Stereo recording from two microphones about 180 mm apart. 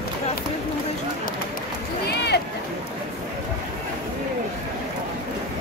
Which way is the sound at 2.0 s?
70° left (ahead or behind).